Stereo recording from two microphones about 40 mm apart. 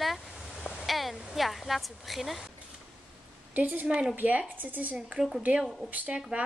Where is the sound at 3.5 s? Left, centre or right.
Right.